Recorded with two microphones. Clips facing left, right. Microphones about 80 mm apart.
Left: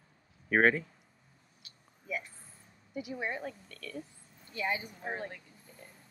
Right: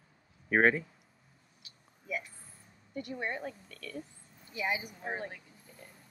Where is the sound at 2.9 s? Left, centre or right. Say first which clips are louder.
Even; centre.